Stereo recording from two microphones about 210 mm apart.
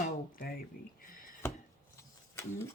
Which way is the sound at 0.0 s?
45° left (ahead or behind).